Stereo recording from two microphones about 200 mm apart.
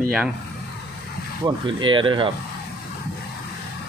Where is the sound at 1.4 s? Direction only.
25° right (ahead or behind).